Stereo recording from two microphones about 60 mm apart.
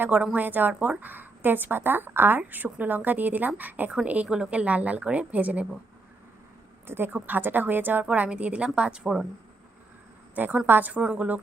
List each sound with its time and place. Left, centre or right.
0.0 s a woman's voice: right
6.8 s a woman's voice: right
8.0 s speech: right
10.3 s a woman's voice: right
11.0 s speech: centre